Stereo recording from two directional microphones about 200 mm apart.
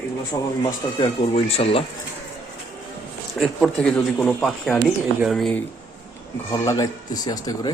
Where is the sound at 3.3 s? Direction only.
5° left (ahead or behind).